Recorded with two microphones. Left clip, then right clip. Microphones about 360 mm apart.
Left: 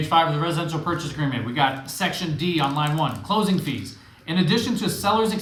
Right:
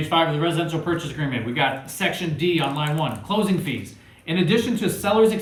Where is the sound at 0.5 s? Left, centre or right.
Centre.